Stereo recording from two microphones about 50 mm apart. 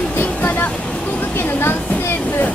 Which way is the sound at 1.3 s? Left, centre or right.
Left.